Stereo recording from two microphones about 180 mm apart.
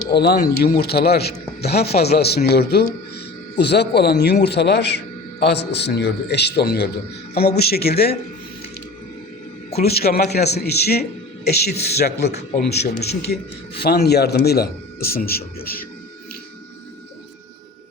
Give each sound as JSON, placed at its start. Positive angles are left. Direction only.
{"t": 0.1, "sound": "a man's voice", "side_deg": 65}
{"t": 9.7, "sound": "a man's voice", "side_deg": 60}